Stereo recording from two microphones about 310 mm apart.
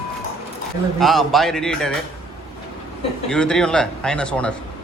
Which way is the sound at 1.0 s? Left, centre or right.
Centre.